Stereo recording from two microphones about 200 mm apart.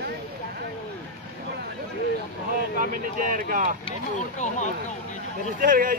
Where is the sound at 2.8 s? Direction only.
45° right (ahead or behind).